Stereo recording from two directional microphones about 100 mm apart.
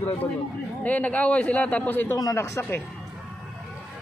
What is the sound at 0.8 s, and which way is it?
A man's voice, 15° left (ahead or behind).